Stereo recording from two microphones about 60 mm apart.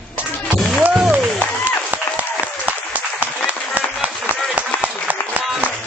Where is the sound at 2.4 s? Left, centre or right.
Right.